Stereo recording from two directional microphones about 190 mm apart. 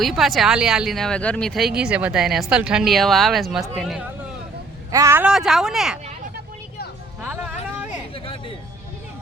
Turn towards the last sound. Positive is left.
turn(degrees=-10)  # may be behind; listen again after turning